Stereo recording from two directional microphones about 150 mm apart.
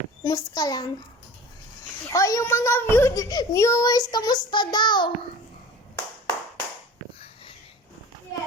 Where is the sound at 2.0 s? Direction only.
20° left (ahead or behind).